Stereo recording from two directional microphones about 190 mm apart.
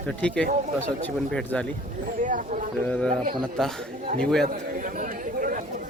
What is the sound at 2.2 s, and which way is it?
Speech, 40° right (ahead or behind).